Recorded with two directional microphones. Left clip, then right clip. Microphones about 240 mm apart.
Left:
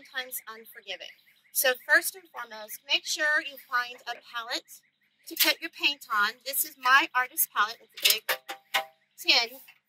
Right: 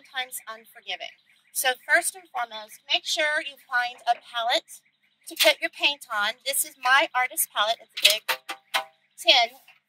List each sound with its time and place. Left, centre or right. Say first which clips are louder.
0.0 s a woman's voice: right 4 dB; centre
8.3 s music: right 2 dB; centre